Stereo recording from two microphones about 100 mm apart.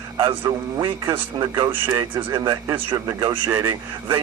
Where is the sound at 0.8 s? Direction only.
55° right (ahead or behind).